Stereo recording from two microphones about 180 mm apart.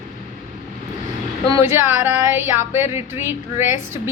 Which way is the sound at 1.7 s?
15° right (ahead or behind).